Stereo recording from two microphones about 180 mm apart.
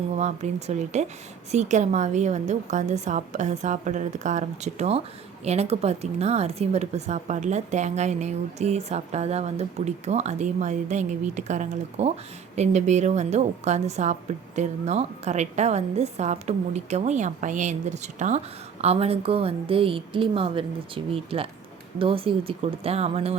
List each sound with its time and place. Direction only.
0.2 s a woman's voice: 40° right (ahead or behind)